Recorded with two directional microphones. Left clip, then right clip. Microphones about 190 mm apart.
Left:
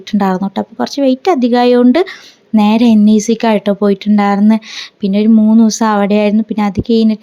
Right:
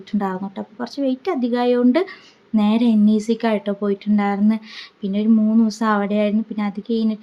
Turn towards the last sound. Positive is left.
turn(degrees=40)  # may be behind; listen again after turning